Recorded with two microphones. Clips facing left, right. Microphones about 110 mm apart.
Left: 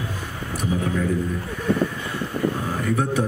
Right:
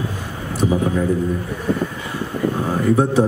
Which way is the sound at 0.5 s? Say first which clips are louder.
Right 6 dB; 25° right (ahead or behind).